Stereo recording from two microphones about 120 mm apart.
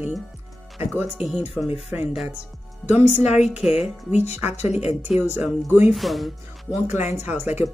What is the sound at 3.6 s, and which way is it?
Speech, 5° right (ahead or behind).